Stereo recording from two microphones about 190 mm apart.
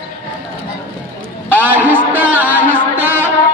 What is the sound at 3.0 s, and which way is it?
Music, 10° right (ahead or behind).